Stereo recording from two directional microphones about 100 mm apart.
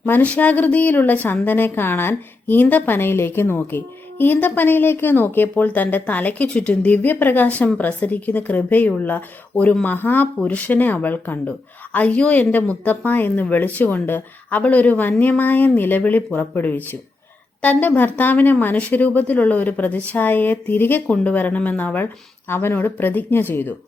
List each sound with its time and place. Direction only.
0.0 s speech: 15° left (ahead or behind)